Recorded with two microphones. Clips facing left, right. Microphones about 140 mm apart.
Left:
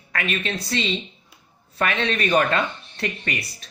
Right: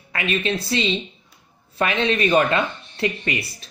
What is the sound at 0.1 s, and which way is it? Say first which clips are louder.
Speech: right 3 dB; 15° right (ahead or behind).